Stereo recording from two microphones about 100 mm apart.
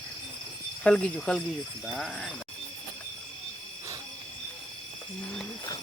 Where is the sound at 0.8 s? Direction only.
10° left (ahead or behind).